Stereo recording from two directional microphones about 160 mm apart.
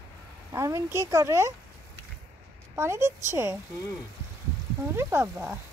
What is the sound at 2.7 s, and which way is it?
Speech, 15° right (ahead or behind).